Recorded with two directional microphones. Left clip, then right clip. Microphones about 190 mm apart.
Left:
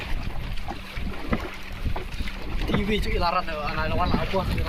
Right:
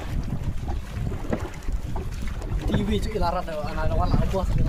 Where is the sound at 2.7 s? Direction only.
70° right (ahead or behind); by 3.9 s 50° right (ahead or behind).